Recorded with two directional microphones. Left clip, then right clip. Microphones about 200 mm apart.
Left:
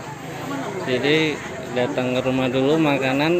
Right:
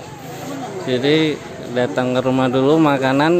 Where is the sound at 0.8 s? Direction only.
25° right (ahead or behind).